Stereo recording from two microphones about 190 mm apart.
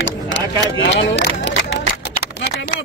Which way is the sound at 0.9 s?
70° left (ahead or behind).